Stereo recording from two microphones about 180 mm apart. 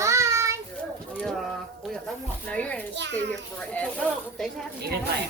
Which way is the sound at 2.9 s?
75° right (ahead or behind).